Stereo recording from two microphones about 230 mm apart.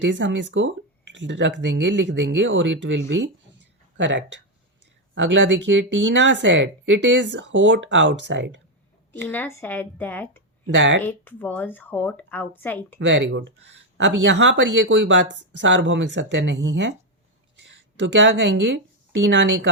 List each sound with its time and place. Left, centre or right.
0.0 s speech: right
9.3 s speech: centre
10.7 s speech: right
11.0 s speech: centre
13.0 s speech: right